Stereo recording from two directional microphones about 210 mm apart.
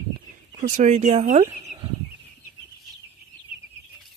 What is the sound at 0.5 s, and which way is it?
Speech, 35° right (ahead or behind).